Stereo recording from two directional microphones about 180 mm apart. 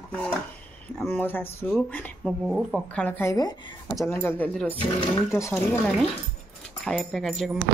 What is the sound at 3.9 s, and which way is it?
Speech, 5° left (ahead or behind).